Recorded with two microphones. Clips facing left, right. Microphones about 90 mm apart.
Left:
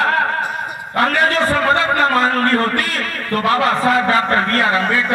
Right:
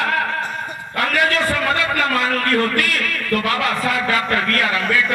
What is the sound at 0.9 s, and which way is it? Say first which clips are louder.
A man's voice: left 3 dB; 35° left (ahead or behind).